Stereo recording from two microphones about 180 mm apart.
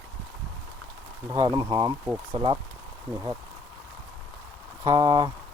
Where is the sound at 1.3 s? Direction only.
20° right (ahead or behind).